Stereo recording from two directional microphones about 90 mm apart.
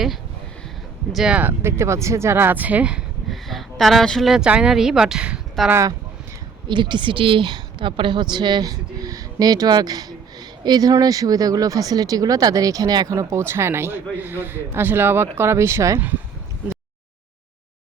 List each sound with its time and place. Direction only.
1.1 s speech: 5° right (ahead or behind)
1.4 s speech: 25° right (ahead or behind)
3.2 s a sound: centre (ahead or behind)
4.3 s speech: 10° right (ahead or behind)
6.7 s a woman's voice: 60° right (ahead or behind); by 16.0 s 30° right (ahead or behind)